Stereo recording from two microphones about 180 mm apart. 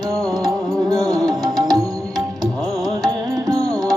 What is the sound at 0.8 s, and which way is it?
Music, 20° right (ahead or behind).